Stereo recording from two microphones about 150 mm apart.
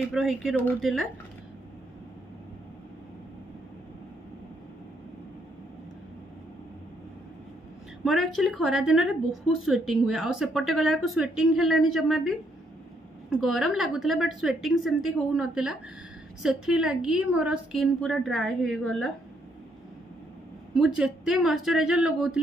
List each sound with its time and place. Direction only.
0.1 s a woman's voice: centre (ahead or behind)
8.0 s a woman's voice: centre (ahead or behind)
20.7 s a woman's voice: 5° right (ahead or behind)